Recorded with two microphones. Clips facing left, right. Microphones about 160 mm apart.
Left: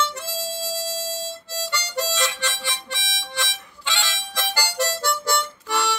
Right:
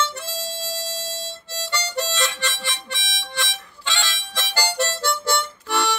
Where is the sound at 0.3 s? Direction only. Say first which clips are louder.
Left 1 dB; 10° left (ahead or behind).